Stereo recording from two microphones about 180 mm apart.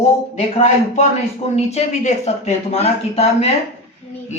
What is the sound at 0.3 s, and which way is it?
Speech, 40° left (ahead or behind).